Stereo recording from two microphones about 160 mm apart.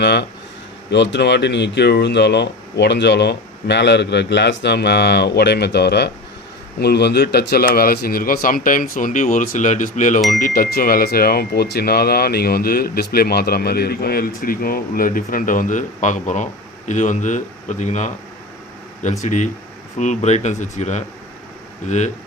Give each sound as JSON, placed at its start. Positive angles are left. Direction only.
{"t": 0.0, "sound": "speech", "side_deg": 90}
{"t": 19.2, "sound": "speech", "side_deg": 50}